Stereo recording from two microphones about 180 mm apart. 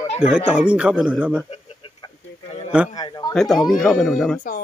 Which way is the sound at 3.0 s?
25° left (ahead or behind).